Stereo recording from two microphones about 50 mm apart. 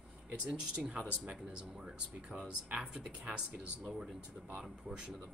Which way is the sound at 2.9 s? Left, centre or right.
Right.